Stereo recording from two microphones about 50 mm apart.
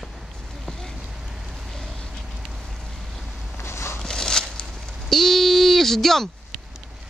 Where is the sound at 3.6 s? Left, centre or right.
Left.